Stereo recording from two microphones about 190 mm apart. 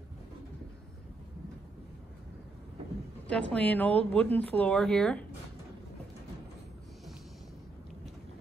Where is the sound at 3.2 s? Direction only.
5° left (ahead or behind).